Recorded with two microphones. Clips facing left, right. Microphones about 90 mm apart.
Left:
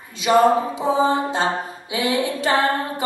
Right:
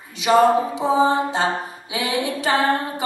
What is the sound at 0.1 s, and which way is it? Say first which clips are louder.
Mantra: even; 20° right (ahead or behind).